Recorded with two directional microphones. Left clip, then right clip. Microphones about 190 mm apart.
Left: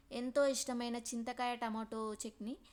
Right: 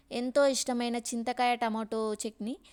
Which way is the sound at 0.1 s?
35° right (ahead or behind).